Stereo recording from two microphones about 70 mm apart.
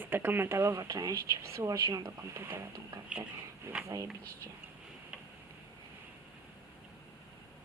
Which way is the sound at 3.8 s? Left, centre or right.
Right.